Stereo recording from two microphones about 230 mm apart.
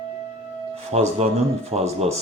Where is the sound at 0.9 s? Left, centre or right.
Right.